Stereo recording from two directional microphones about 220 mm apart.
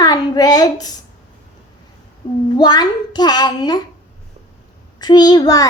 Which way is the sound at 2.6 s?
20° left (ahead or behind).